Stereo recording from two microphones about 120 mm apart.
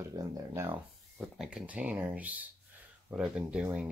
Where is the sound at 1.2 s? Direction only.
5° right (ahead or behind).